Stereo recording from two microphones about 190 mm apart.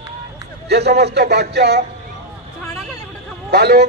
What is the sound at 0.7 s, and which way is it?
A man's voice, 60° right (ahead or behind).